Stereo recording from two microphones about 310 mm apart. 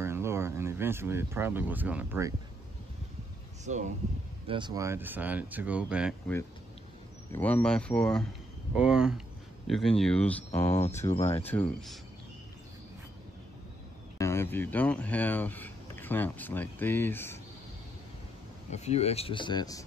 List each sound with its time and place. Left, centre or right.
0.0 s speech: centre
3.6 s speech: right; by 11.2 s centre
11.4 s speech: centre
14.1 s speech: centre
18.7 s speech: left